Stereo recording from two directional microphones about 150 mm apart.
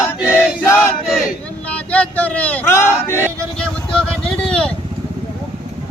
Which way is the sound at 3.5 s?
5° left (ahead or behind).